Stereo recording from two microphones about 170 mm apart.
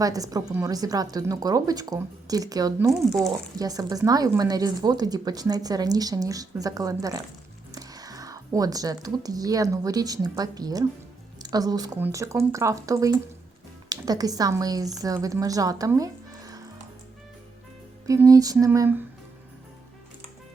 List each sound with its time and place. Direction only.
0.0 s speech: 20° right (ahead or behind)
2.9 s speech: centre (ahead or behind)
3.2 s a woman's voice: 20° right (ahead or behind)
18.0 s speech: 20° right (ahead or behind)